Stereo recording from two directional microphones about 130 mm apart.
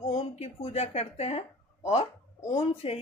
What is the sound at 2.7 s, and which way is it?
Speech, 50° left (ahead or behind).